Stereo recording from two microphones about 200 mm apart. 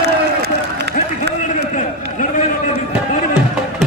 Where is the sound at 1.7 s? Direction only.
40° left (ahead or behind).